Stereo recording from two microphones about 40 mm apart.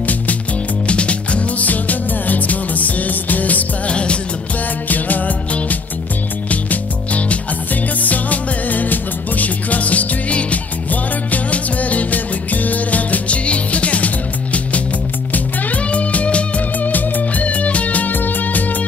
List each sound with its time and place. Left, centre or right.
0.8 s music: left
1.7 s music: left
3.9 s music: left
4.8 s music: left
16.8 s music: left